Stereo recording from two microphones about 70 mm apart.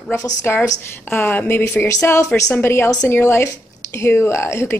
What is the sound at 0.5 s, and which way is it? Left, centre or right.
A woman's voice, left.